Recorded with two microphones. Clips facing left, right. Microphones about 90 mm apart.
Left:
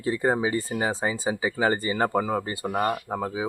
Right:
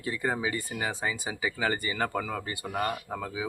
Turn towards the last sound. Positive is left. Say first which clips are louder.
# left 6 dB
turn(degrees=30)  # may be behind; listen again after turning